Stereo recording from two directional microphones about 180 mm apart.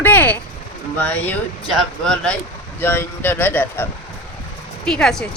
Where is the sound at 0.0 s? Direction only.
10° left (ahead or behind).